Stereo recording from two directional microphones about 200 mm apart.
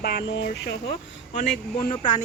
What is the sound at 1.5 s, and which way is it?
Speech, 45° left (ahead or behind).